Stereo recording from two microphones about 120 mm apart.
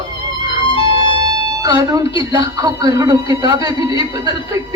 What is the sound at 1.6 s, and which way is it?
A man's voice, 30° right (ahead or behind).